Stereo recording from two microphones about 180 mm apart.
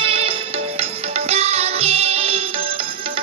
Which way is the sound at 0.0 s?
30° right (ahead or behind).